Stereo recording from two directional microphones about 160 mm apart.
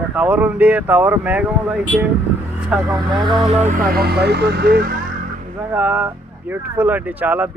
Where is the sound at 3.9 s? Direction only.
85° right; by 5.0 s 65° right (ahead or behind).